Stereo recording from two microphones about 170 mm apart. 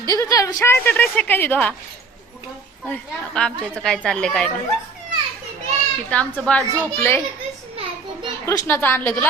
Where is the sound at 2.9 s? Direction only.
5° left (ahead or behind).